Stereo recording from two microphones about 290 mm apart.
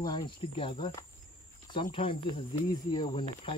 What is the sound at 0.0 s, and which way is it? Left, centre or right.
Speech, centre.